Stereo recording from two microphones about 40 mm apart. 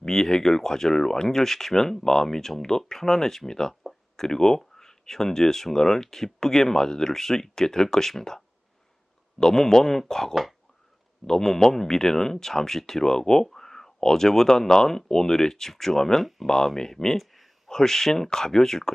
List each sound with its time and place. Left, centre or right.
0.0 s speech: centre
17.2 s a sound: centre
17.7 s speech: centre